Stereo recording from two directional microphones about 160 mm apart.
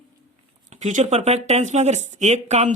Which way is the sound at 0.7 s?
50° right (ahead or behind).